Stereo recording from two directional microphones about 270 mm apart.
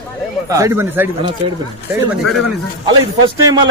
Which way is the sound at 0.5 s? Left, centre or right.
Centre.